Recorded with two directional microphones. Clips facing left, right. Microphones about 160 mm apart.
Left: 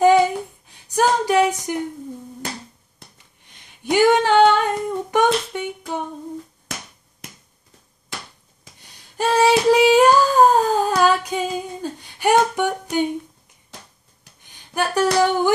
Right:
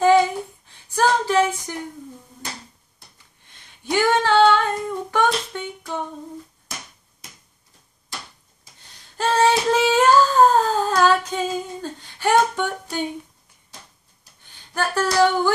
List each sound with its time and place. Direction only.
0.0 s a sound: 15° left (ahead or behind)
0.9 s female singing: 15° left (ahead or behind)
3.4 s singing: 15° left (ahead or behind)
9.1 s child singing: 15° left (ahead or behind)
9.7 s humming: 15° left (ahead or behind)
14.4 s a sound: 15° left (ahead or behind)